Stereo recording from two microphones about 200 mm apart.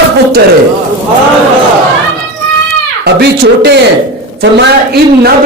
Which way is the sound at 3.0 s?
55° right (ahead or behind).